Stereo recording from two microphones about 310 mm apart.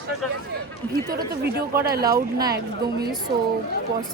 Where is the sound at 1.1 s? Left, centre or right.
Right.